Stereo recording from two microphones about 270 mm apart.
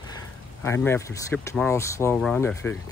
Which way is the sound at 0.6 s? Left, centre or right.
Centre.